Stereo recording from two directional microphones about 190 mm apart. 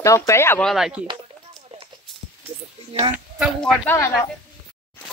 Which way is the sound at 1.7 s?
30° right (ahead or behind).